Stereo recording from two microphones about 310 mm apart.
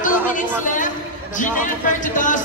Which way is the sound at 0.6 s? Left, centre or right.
Left.